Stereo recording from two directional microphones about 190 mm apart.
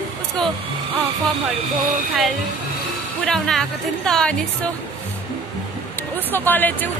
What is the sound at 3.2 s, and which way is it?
A woman's voice, 5° left (ahead or behind).